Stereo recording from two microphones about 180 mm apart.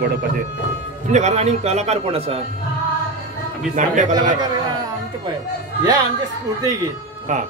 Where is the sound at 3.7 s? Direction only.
45° right (ahead or behind).